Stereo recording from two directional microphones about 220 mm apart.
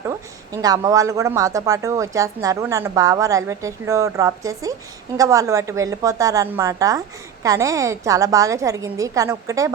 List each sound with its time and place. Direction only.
0.0 s a woman's voice: 15° right (ahead or behind)